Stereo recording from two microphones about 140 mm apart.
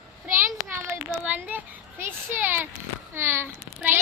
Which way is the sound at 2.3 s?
15° right (ahead or behind).